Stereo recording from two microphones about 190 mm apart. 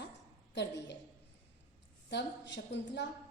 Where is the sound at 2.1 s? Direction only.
65° left (ahead or behind).